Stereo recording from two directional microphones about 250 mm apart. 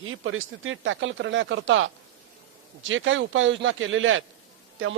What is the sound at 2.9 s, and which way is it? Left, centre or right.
Speech, right.